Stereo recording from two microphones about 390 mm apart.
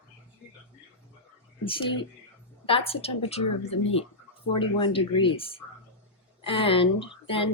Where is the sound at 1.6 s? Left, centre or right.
Centre.